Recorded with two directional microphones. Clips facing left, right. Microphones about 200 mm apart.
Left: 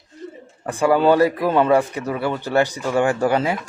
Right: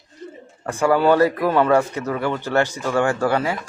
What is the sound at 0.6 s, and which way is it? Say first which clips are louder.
A man's voice: left 1 dB; 15° left (ahead or behind).